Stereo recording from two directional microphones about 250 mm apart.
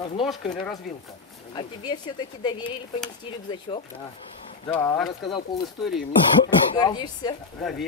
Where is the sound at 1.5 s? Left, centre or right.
Centre.